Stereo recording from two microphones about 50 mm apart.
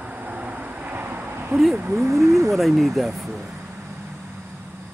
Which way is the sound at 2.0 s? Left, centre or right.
Right.